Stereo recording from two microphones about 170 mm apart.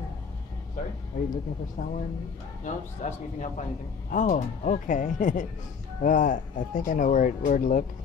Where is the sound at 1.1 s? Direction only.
50° left (ahead or behind).